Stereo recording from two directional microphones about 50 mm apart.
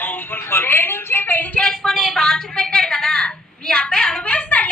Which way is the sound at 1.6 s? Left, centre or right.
Centre.